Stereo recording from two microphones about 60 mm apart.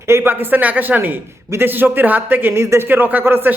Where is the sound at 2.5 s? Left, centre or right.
Right.